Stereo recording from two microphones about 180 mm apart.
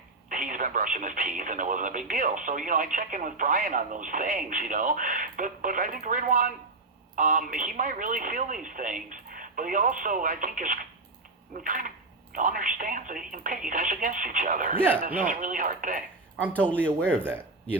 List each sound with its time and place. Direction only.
0.3 s speech: 45° right (ahead or behind)
17.2 s speech: 10° right (ahead or behind)